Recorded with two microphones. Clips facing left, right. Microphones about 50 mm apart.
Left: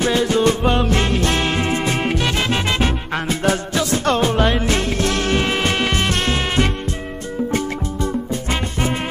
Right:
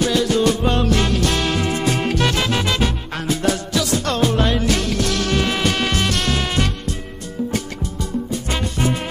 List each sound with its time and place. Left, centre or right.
0.0 s music: left